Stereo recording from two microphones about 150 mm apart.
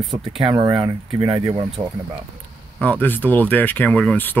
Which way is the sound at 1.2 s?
35° right (ahead or behind).